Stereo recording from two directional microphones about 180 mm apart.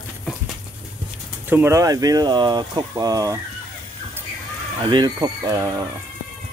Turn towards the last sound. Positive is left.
turn(degrees=-15)  # may be behind; listen again after turning